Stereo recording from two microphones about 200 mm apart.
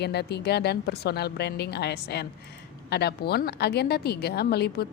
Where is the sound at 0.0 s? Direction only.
55° left (ahead or behind).